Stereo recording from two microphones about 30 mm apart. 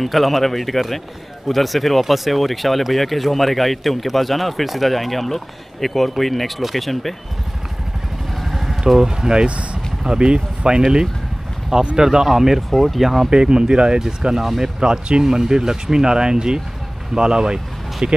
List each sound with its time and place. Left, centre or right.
0.0 s speech: centre
8.4 s vehicle: centre
8.8 s speech: centre
10.0 s speech: right
12.0 s speech: centre
12.7 s speech: centre
13.3 s speech: right
18.0 s speech: right